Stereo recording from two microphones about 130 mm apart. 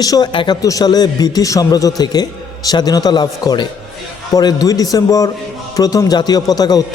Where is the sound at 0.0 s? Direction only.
30° left (ahead or behind).